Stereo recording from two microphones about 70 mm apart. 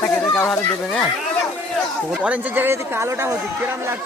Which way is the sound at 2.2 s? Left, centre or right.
Right.